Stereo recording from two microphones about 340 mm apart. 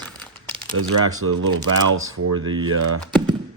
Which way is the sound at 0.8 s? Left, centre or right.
Right.